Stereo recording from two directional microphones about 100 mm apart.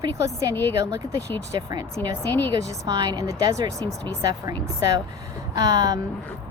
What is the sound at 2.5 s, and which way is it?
A woman's voice, 45° right (ahead or behind).